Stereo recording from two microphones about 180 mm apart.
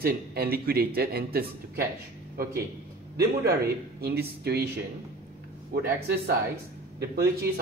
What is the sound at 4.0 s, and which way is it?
Speech, 60° right (ahead or behind).